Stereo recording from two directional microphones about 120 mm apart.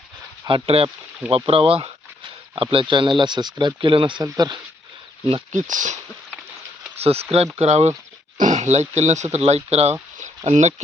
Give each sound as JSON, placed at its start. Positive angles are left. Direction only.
{"t": 0.4, "sound": "speech", "side_deg": -50}
{"t": 5.5, "sound": "speech", "side_deg": -90}
{"t": 6.9, "sound": "speech", "side_deg": -60}
{"t": 8.4, "sound": "speech", "side_deg": -80}